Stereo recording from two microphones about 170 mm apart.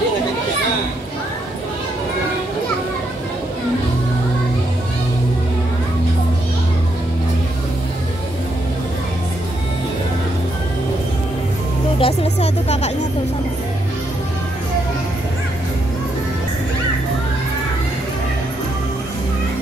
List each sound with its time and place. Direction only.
12.0 s music: 40° left (ahead or behind)